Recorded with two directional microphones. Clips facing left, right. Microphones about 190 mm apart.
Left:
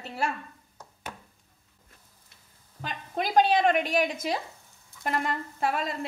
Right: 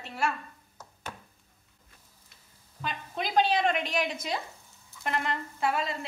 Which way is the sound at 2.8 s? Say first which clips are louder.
Left 2 dB; 45° left (ahead or behind).